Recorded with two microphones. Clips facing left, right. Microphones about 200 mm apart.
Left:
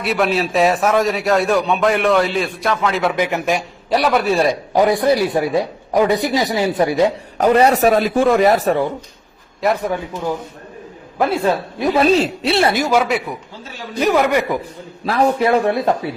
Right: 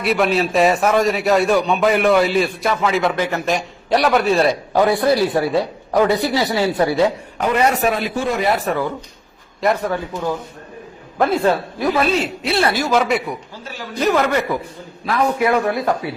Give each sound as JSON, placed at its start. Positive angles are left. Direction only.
{"t": 0.0, "sound": "a man's voice", "side_deg": 0}
{"t": 3.2, "sound": "a man's voice", "side_deg": 15}
{"t": 7.3, "sound": "a man's voice", "side_deg": 35}
{"t": 9.6, "sound": "a man's voice", "side_deg": 5}
{"t": 12.2, "sound": "a man's voice", "side_deg": 30}
{"t": 12.9, "sound": "a man's voice", "side_deg": 5}
{"t": 14.0, "sound": "a man's voice", "side_deg": 15}
{"t": 15.0, "sound": "a man's voice", "side_deg": 35}